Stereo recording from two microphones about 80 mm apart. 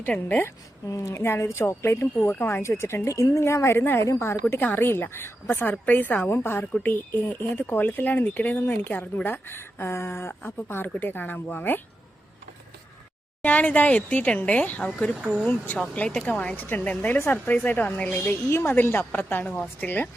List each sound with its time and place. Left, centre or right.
0.1 s speech: centre
0.9 s speech: left
13.4 s speech: centre
15.2 s speech: centre
15.4 s speech: left
15.8 s speech: centre